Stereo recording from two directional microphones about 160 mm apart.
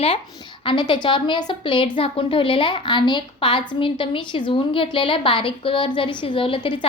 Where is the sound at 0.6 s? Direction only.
30° left (ahead or behind).